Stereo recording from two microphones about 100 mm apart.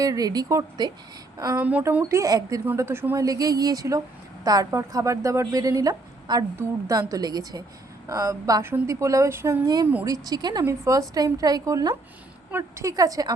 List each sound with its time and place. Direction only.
0.0 s a woman's voice: 35° right (ahead or behind)
1.5 s speech: 15° right (ahead or behind)
2.0 s a woman's voice: 30° right (ahead or behind)
2.7 s speech: 25° right (ahead or behind)
3.2 s a woman's voice: 35° right (ahead or behind); by 10.1 s 20° right (ahead or behind)
10.1 s a woman's voice: 40° right (ahead or behind)
12.5 s a woman's voice: 25° right (ahead or behind)